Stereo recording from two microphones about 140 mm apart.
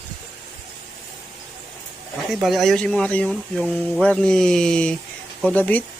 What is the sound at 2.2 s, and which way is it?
Speech, centre (ahead or behind).